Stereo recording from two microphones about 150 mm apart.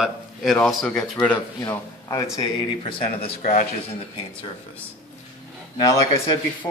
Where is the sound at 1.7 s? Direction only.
20° left (ahead or behind).